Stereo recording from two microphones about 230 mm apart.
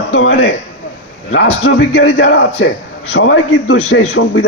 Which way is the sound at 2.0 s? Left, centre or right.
Left.